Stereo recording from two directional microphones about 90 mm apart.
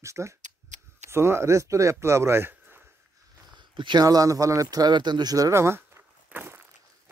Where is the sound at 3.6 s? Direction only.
60° right (ahead or behind).